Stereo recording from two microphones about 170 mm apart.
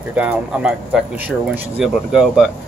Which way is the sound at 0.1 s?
10° right (ahead or behind).